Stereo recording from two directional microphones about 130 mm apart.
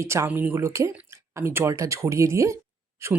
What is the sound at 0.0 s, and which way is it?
Speech, 20° right (ahead or behind).